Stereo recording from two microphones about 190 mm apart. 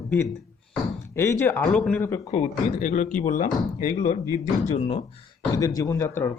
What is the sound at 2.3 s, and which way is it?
Speech, 40° left (ahead or behind).